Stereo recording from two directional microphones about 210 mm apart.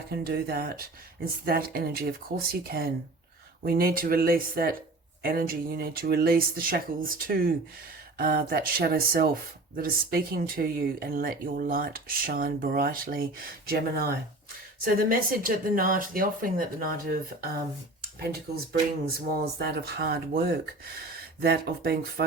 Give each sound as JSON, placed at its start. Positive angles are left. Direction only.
{"t": 0.1, "sound": "speech", "side_deg": -50}
{"t": 19.0, "sound": "speech", "side_deg": -50}